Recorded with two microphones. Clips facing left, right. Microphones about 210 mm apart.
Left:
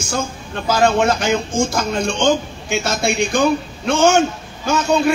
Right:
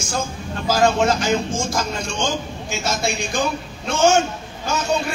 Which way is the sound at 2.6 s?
60° left (ahead or behind).